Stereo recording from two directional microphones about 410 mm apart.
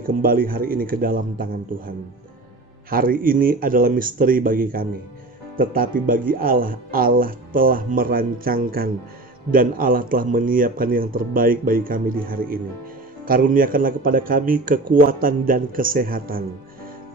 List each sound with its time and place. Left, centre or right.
0.0 s speech: right